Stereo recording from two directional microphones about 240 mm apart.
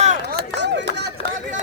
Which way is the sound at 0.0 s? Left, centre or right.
Right.